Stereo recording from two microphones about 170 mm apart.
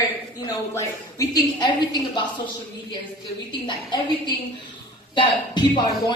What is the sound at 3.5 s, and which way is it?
A woman's voice, 25° left (ahead or behind).